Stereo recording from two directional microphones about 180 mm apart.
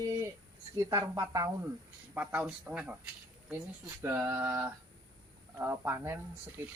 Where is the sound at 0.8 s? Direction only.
20° right (ahead or behind).